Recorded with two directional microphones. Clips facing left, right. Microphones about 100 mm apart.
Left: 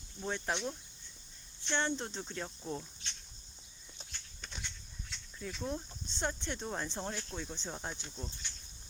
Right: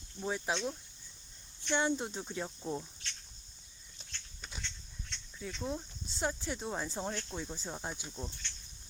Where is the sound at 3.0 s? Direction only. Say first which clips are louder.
Right 1 dB; 20° left (ahead or behind).